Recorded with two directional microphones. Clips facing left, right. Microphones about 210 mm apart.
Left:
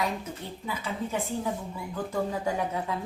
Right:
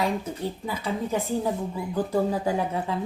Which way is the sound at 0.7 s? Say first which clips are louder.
Right 3 dB; 35° right (ahead or behind).